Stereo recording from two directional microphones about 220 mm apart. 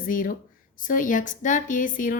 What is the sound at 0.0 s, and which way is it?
A woman's voice, 40° left (ahead or behind).